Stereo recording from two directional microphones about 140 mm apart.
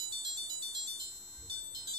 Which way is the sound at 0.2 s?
30° right (ahead or behind).